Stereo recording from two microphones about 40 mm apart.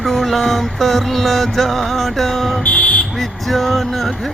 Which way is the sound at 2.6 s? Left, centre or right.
Left.